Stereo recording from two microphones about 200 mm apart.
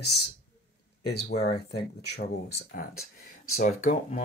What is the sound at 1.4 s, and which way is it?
Speech, 55° left (ahead or behind).